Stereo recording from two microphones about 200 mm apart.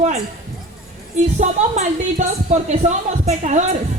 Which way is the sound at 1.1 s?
35° right (ahead or behind).